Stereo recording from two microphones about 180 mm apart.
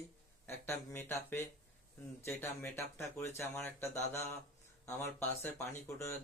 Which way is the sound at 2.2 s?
15° left (ahead or behind).